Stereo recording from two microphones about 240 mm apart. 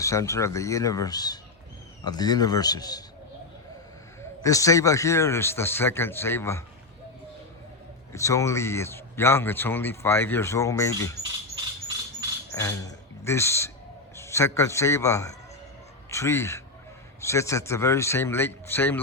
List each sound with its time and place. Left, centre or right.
0.0 s a man's voice: centre
4.2 s a man's voice: centre
8.1 s a man's voice: centre
12.5 s a man's voice: centre